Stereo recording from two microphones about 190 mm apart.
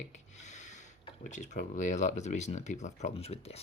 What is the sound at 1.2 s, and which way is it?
Speech, 40° left (ahead or behind).